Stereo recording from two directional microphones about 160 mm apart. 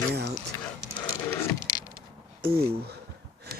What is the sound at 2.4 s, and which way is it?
Speech, 85° right.